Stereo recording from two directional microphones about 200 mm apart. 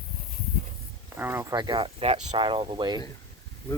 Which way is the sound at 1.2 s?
10° right (ahead or behind).